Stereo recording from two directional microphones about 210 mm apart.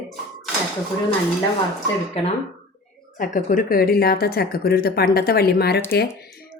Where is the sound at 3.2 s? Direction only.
40° left (ahead or behind).